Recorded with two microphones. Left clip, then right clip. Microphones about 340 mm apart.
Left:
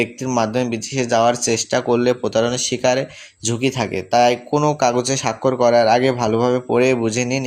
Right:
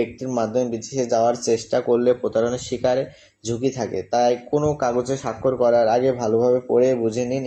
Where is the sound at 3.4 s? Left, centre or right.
Left.